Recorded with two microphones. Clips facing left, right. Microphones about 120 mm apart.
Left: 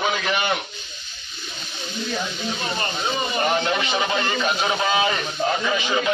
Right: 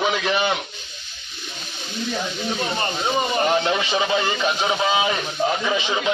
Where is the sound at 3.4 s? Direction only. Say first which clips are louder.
Right 2 dB; 15° right (ahead or behind).